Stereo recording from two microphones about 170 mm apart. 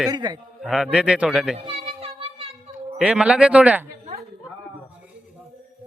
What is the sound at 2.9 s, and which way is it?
Speech, 5° right (ahead or behind).